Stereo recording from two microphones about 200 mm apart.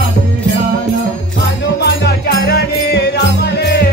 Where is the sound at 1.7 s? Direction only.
55° left (ahead or behind).